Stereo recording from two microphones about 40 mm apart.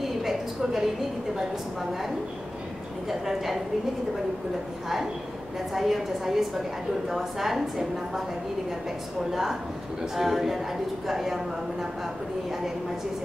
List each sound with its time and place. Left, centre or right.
0.0 s a sound: centre
3.1 s a woman's voice: centre
5.8 s a woman's voice: centre
9.3 s a woman's voice: centre